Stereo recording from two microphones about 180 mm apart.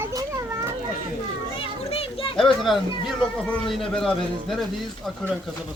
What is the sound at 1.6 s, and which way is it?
Children playing, 30° left (ahead or behind).